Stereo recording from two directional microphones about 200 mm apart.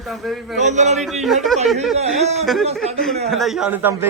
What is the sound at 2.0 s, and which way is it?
Speech, 35° right (ahead or behind).